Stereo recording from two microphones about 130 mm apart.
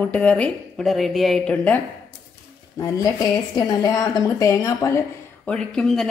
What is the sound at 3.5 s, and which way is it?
A woman's voice, 30° left (ahead or behind).